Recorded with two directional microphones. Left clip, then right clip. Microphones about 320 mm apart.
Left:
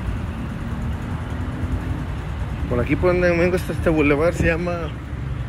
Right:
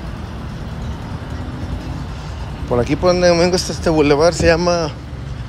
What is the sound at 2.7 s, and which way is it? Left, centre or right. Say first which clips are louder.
Speech: right 5 dB; centre.